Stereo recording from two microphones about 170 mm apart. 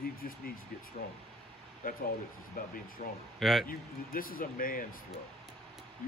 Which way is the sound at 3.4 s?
Centre (ahead or behind).